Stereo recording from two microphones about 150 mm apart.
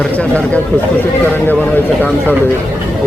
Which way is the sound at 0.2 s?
10° left (ahead or behind).